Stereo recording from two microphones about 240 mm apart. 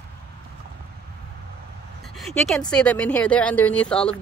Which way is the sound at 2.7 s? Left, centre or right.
Centre.